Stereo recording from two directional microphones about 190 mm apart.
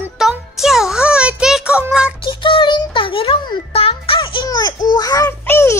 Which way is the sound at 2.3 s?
25° left (ahead or behind).